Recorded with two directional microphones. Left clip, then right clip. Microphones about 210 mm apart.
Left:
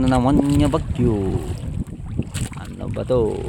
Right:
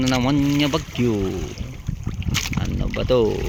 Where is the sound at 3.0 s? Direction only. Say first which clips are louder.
Right 1 dB; centre (ahead or behind).